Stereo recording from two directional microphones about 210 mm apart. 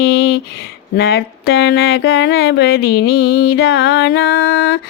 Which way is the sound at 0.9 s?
50° left (ahead or behind).